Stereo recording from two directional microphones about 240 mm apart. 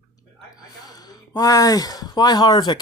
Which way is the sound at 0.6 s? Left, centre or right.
Centre.